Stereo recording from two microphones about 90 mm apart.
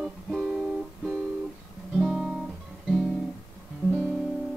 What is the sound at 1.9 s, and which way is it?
Guitar, 5° right (ahead or behind).